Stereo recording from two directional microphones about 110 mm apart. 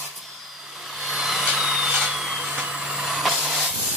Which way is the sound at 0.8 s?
Centre (ahead or behind).